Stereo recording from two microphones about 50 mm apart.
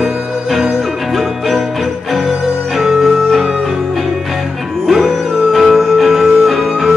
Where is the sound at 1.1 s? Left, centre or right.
Centre.